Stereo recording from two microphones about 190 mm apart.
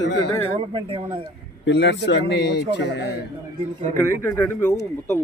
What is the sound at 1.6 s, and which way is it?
A man's voice, 65° left (ahead or behind).